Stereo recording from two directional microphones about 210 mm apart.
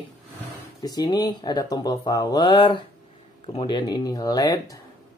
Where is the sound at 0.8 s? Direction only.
20° left (ahead or behind).